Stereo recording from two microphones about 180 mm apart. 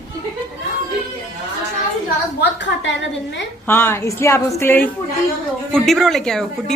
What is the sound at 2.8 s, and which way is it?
Speech, 85° left.